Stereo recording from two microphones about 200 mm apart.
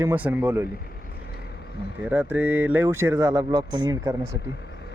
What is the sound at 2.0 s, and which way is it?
Speech, 10° right (ahead or behind).